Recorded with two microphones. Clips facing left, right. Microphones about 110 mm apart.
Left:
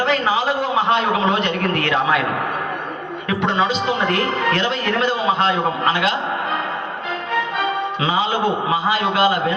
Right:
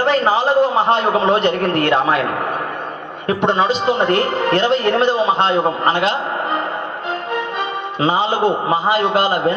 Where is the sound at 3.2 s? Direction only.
40° right (ahead or behind).